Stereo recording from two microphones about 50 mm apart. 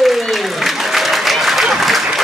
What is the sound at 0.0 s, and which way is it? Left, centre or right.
Applause, centre.